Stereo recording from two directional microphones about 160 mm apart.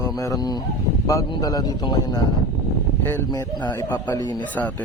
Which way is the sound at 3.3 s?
25° left (ahead or behind).